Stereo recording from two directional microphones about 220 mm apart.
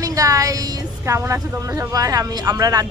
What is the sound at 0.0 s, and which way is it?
Speech, 15° right (ahead or behind).